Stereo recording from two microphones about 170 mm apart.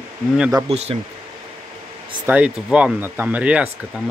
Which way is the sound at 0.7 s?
35° right (ahead or behind).